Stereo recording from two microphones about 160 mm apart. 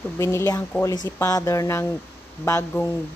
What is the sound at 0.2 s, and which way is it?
Speech, 20° left (ahead or behind).